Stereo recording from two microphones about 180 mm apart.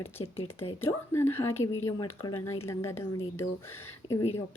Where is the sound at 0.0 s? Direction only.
15° left (ahead or behind).